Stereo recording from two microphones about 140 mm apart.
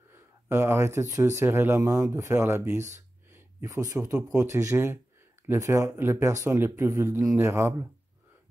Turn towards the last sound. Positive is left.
turn(degrees=-15)  # may be behind; listen again after turning